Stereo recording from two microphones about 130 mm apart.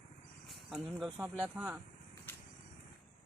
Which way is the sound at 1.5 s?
10° right (ahead or behind).